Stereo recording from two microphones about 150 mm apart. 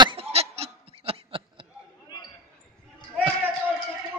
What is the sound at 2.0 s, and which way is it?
Basketball bounce, 25° left (ahead or behind).